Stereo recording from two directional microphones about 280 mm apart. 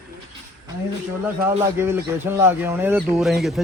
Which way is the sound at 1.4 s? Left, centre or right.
Centre.